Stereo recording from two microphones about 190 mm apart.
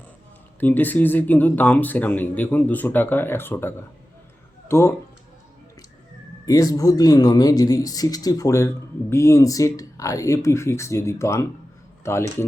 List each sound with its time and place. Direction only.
0.6 s a man's voice: 10° left (ahead or behind)
6.4 s a man's voice: 20° left (ahead or behind)